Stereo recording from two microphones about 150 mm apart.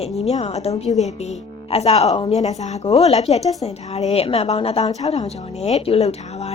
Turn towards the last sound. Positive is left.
turn(degrees=45)  # may be behind; listen again after turning